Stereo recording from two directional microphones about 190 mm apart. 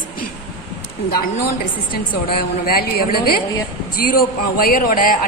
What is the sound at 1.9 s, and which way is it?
A man's voice, 50° left (ahead or behind).